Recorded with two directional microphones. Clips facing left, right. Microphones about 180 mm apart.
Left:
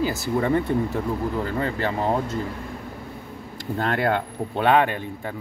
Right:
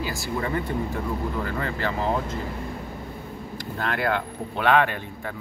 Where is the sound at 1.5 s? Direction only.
25° left (ahead or behind).